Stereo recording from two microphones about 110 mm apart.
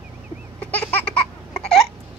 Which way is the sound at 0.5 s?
15° left (ahead or behind).